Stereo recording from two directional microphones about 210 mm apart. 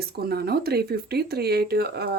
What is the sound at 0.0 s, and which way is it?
Speech, 50° right (ahead or behind).